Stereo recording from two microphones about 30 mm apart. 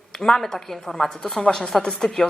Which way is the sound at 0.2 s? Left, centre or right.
Centre.